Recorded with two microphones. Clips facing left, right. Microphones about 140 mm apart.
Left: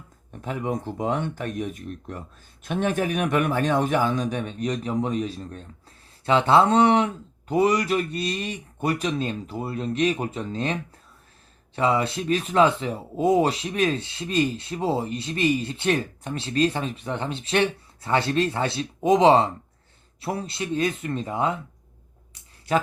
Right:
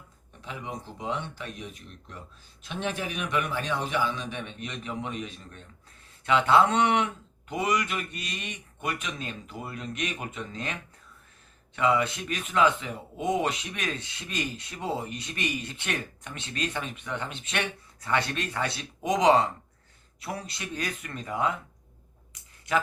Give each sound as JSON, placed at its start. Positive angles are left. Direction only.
{"t": 0.4, "sound": "a man's voice", "side_deg": 50}
{"t": 11.8, "sound": "speech", "side_deg": 30}
{"t": 22.7, "sound": "speech", "side_deg": 35}